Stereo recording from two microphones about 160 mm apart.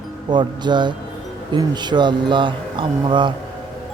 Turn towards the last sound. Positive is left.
turn(degrees=-30)  # may be behind; listen again after turning